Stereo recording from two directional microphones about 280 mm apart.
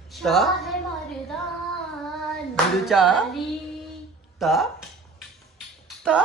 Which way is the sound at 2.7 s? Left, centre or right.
Centre.